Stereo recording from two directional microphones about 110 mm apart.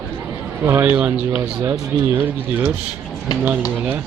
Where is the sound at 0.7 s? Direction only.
25° right (ahead or behind).